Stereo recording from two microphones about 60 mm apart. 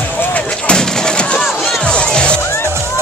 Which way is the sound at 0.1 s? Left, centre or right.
Left.